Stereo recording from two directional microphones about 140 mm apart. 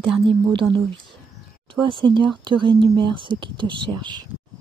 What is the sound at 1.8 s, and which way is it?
Speech, 35° right (ahead or behind).